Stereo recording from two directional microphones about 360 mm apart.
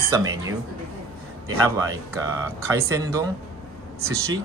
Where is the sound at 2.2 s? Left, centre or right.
Centre.